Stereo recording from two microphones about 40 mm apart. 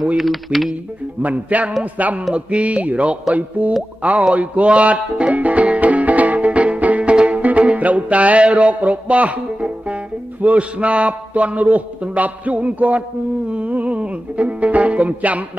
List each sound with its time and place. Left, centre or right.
0.2 s speech: centre
1.2 s speech: right
4.3 s music: right